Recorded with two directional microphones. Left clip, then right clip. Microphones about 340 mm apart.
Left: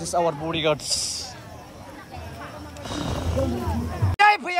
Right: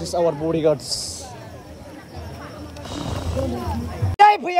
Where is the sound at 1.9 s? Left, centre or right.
Centre.